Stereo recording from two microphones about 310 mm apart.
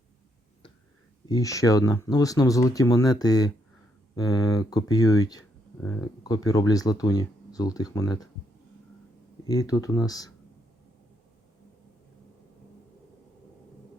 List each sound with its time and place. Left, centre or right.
1.3 s speech: centre
9.4 s speech: centre